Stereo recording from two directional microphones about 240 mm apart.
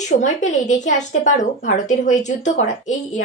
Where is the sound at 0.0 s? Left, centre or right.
Left.